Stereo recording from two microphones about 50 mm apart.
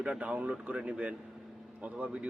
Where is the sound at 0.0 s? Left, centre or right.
Right.